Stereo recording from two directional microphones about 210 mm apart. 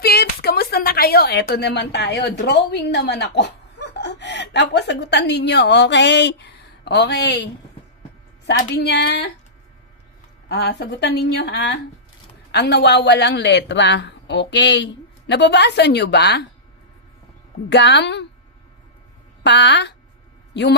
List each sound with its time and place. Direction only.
0.0 s speech: 50° left (ahead or behind)
8.5 s a woman's voice: 50° left (ahead or behind)
10.5 s a woman's voice: 50° left (ahead or behind)
17.7 s a man's voice: 55° left (ahead or behind)
19.4 s a man's voice: 55° left (ahead or behind)